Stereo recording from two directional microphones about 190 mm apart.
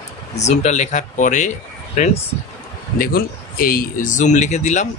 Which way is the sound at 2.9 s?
50° left (ahead or behind).